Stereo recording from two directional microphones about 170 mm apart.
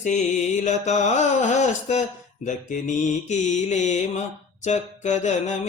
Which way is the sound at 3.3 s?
45° left (ahead or behind).